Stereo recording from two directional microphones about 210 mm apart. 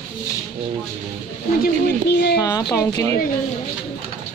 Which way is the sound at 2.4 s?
15° left (ahead or behind).